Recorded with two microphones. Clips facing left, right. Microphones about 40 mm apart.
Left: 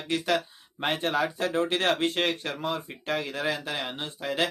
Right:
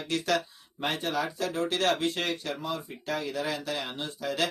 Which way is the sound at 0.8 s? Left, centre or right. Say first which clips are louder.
Left 3 dB; left.